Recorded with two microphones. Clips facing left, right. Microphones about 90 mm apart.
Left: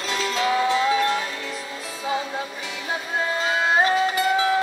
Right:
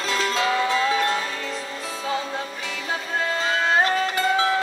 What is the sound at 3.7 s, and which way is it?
Music, 10° left (ahead or behind).